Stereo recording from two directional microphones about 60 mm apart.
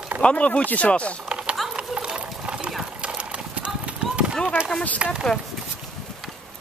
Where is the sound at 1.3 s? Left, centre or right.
Centre.